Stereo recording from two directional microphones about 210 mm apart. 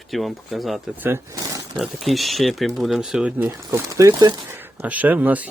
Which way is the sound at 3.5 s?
15° right (ahead or behind).